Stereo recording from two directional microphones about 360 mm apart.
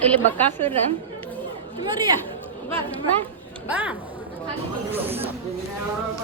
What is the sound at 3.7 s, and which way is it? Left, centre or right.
Speech, centre.